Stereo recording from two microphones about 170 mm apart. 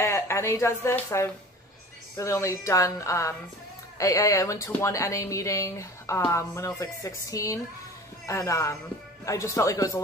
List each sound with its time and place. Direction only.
0.0 s speech: 15° left (ahead or behind)